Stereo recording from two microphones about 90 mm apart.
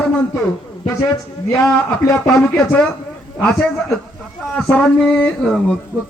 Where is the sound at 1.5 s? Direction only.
10° left (ahead or behind).